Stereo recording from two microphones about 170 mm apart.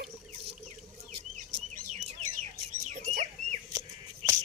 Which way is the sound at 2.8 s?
45° right (ahead or behind).